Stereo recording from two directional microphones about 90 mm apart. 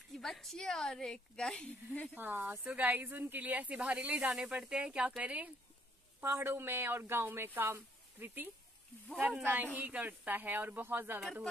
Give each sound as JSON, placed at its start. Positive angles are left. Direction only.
{"t": 0.2, "sound": "a woman's voice", "side_deg": 5}
{"t": 2.1, "sound": "speech", "side_deg": -20}
{"t": 9.0, "sound": "a woman's voice", "side_deg": 5}
{"t": 9.4, "sound": "speech", "side_deg": -20}